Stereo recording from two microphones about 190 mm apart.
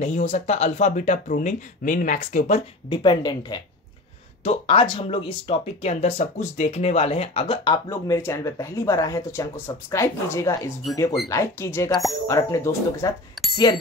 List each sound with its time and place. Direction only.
0.0 s speech: 35° left (ahead or behind)
2.9 s speech: 25° left (ahead or behind)
13.4 s a sound: centre (ahead or behind)